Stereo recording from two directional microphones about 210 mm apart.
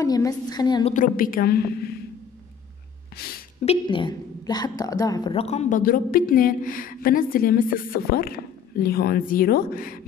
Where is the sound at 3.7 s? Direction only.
25° left (ahead or behind).